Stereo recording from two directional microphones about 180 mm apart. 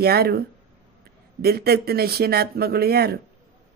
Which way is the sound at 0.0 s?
60° right (ahead or behind).